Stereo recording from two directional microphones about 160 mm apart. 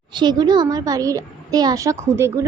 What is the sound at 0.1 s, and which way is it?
A child's voice, 30° right (ahead or behind).